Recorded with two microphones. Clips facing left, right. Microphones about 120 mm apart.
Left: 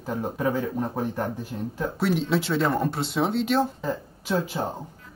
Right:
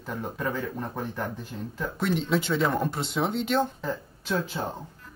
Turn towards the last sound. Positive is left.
turn(degrees=10)  # may be behind; listen again after turning